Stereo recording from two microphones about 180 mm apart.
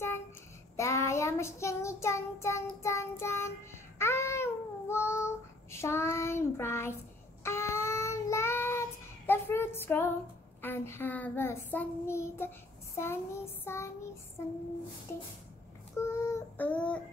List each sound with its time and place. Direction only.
0.7 s child singing: 15° left (ahead or behind)
16.0 s child singing: 15° left (ahead or behind)